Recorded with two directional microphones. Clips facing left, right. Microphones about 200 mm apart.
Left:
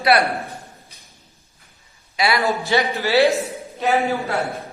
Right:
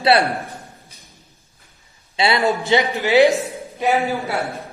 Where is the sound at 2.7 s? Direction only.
20° right (ahead or behind).